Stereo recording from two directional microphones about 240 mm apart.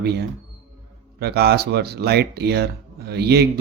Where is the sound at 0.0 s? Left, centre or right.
Right.